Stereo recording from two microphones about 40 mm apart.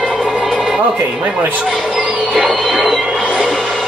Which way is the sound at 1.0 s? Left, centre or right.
Right.